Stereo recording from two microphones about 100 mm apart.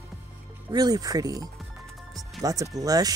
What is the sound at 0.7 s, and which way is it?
Speech, 40° right (ahead or behind).